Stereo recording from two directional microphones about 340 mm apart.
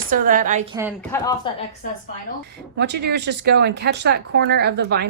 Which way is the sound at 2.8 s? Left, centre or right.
Right.